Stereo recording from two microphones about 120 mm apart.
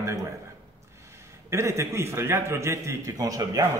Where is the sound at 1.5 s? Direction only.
25° right (ahead or behind).